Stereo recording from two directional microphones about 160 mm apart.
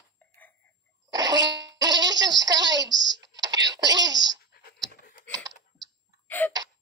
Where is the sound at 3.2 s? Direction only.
25° right (ahead or behind).